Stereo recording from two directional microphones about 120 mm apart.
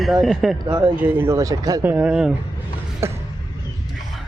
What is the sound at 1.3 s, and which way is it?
Speech, 30° right (ahead or behind).